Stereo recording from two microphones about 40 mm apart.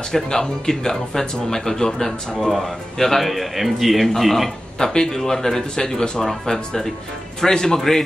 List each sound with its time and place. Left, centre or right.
0.1 s speech: centre
3.3 s a man's voice: centre
4.7 s speech: centre